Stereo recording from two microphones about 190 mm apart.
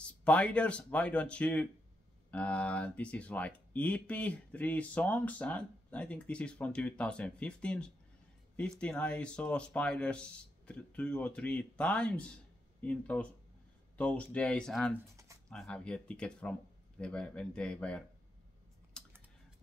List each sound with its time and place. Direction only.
0.0 s speech: 5° left (ahead or behind)
18.9 s typing: 5° left (ahead or behind)